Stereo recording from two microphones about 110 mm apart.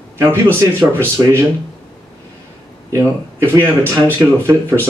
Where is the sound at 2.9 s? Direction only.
25° right (ahead or behind).